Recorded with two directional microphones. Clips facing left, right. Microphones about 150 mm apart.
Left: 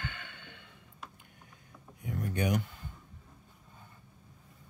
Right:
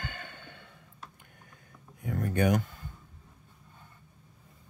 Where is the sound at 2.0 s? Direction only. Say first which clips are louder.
Right 5 dB; 50° right (ahead or behind).